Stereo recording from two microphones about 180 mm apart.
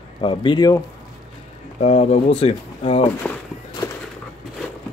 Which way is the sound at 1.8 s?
35° left (ahead or behind).